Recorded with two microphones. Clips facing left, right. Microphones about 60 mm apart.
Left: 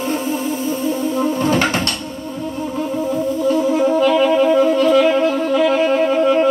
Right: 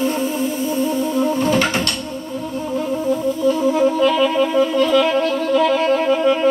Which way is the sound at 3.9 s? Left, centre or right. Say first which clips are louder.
Left 2 dB; left.